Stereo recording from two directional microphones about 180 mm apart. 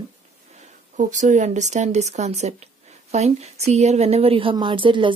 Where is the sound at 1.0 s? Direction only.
40° right (ahead or behind).